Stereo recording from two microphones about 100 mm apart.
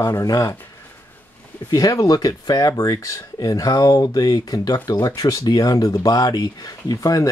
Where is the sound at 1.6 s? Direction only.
35° left (ahead or behind).